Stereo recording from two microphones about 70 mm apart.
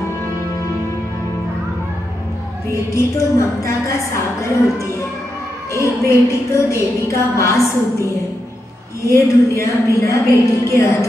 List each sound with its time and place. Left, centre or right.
2.7 s music: left